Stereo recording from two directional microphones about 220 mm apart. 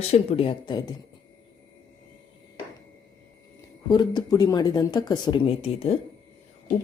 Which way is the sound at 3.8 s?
20° left (ahead or behind).